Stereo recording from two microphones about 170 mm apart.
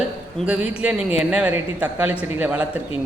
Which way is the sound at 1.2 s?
5° right (ahead or behind).